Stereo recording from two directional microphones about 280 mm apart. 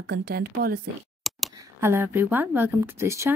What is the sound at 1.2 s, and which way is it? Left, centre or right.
Speech, centre.